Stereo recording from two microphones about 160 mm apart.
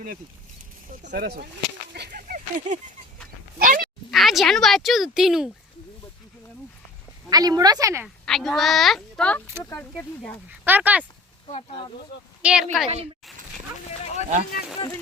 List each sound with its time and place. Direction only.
1.1 s speech: 75° right (ahead or behind)
1.9 s a sound: 90° right; by 2.7 s 60° right (ahead or behind)
3.6 s speech: 60° right (ahead or behind)
4.1 s speech: centre (ahead or behind)
7.3 s a woman's voice: 25° right (ahead or behind)
8.0 s a woman's voice: centre (ahead or behind)
10.5 s speech: 10° right (ahead or behind)
12.4 s speech: 5° right (ahead or behind)
14.0 s speech: 45° left (ahead or behind)